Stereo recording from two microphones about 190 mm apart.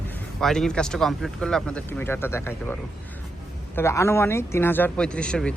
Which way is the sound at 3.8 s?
15° left (ahead or behind).